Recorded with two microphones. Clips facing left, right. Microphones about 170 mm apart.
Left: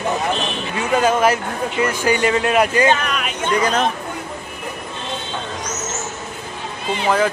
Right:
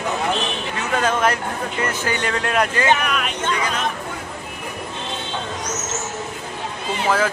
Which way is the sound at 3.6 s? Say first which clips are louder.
Left 6 dB; 40° left (ahead or behind).